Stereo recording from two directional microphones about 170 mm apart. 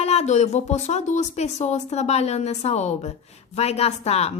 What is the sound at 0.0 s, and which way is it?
Speech, 40° left (ahead or behind).